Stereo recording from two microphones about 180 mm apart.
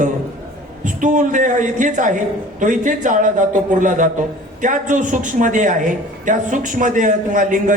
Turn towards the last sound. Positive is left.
turn(degrees=-45)  # may be behind; listen again after turning